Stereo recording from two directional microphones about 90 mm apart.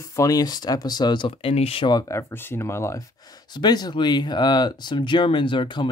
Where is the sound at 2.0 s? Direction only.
30° left (ahead or behind).